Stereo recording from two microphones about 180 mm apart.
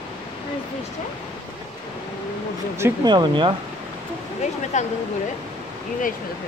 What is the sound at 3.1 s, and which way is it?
Speech, 25° right (ahead or behind).